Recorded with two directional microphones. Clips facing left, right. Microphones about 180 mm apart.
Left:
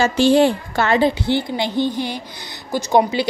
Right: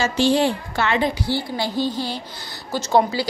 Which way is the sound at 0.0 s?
55° left (ahead or behind).